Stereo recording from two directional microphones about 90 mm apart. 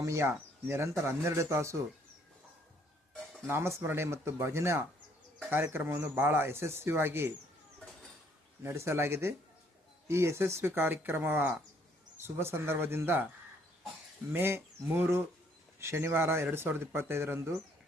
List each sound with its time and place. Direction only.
0.0 s speech: 35° right (ahead or behind)
3.5 s speech: 30° right (ahead or behind)
8.6 s speech: 30° right (ahead or behind)
14.3 s speech: 25° right (ahead or behind)